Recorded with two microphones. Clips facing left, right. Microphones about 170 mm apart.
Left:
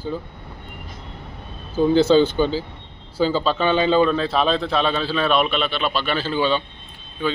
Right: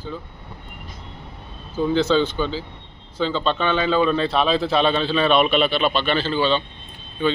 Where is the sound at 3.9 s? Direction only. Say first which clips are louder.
Left 1 dB; centre (ahead or behind).